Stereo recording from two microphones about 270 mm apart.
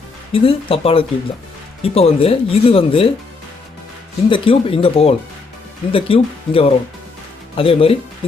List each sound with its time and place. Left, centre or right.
0.3 s speech: left
4.3 s speech: centre